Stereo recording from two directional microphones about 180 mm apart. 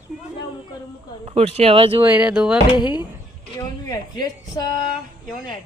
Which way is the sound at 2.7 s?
25° left (ahead or behind).